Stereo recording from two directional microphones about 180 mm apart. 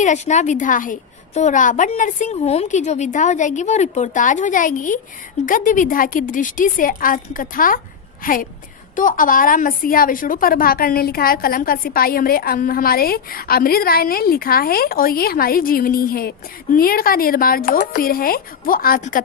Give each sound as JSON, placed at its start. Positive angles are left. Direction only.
{"t": 0.0, "sound": "a woman's voice", "side_deg": 40}